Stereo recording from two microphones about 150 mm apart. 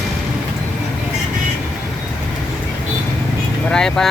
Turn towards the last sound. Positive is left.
turn(degrees=5)  # may be behind; listen again after turning